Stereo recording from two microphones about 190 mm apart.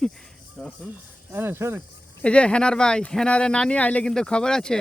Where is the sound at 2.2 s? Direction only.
5° left (ahead or behind).